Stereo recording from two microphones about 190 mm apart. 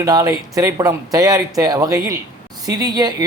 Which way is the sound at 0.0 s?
20° right (ahead or behind).